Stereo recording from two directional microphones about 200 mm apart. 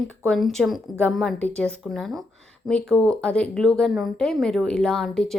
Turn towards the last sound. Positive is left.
turn(degrees=5)  # may be behind; listen again after turning